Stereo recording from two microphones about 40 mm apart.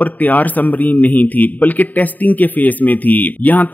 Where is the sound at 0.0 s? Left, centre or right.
Left.